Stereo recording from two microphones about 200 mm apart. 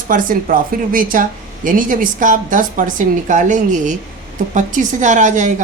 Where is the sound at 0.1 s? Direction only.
45° right (ahead or behind).